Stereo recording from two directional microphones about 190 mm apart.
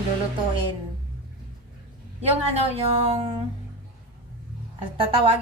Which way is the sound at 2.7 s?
30° right (ahead or behind).